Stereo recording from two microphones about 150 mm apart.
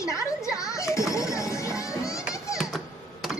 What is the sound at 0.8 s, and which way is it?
Children playing, 20° left (ahead or behind).